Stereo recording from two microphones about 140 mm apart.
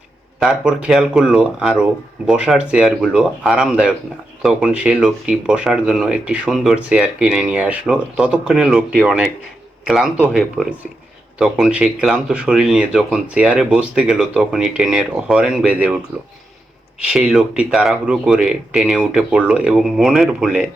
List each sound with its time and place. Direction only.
0.3 s speech: 5° right (ahead or behind)
17.0 s speech: 5° right (ahead or behind)